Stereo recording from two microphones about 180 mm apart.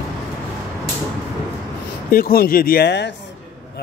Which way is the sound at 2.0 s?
55° left (ahead or behind).